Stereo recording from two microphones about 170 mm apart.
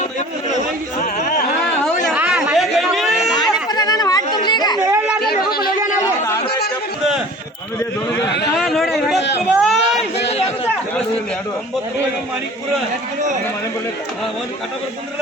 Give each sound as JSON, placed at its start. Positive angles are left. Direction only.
{"t": 1.0, "sound": "yodeling", "side_deg": 60}
{"t": 2.1, "sound": "chatter", "side_deg": -10}
{"t": 3.7, "sound": "chatter", "side_deg": 25}
{"t": 5.2, "sound": "a sound", "side_deg": 65}
{"t": 8.5, "sound": "a sound", "side_deg": 0}
{"t": 10.2, "sound": "chatter", "side_deg": 40}